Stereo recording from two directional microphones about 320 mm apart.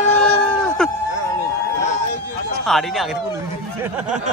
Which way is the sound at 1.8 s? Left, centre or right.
Left.